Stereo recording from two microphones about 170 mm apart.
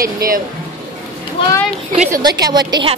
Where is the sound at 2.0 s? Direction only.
20° right (ahead or behind).